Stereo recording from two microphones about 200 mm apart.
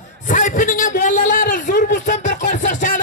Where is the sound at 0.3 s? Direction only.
40° left (ahead or behind).